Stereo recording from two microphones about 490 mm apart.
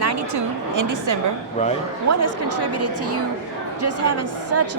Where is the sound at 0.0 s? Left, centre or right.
Right.